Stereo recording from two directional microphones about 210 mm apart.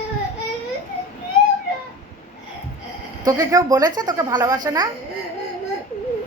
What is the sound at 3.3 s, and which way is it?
A woman's voice, 15° right (ahead or behind).